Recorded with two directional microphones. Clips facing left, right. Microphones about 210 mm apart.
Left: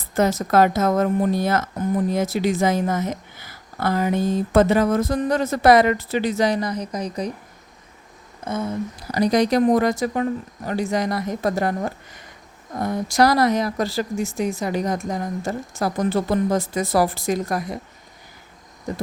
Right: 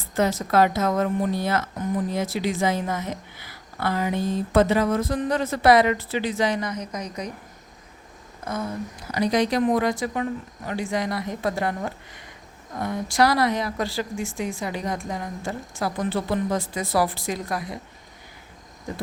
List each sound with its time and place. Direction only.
0.1 s speech: 45° left (ahead or behind)
9.1 s a woman's voice: 40° left (ahead or behind)